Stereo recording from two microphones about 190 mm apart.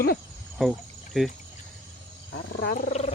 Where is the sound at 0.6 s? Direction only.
Centre (ahead or behind).